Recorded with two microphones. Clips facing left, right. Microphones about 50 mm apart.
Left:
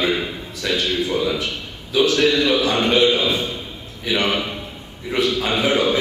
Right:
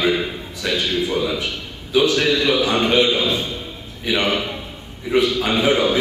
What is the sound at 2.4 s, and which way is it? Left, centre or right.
A man's voice, centre.